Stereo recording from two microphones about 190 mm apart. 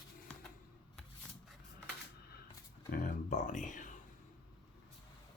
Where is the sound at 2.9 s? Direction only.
45° left (ahead or behind).